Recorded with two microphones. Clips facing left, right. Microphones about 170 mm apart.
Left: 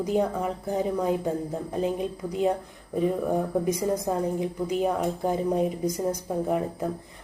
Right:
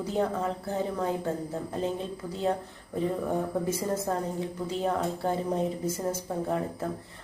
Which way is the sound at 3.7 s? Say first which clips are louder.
Left 3 dB; 15° left (ahead or behind).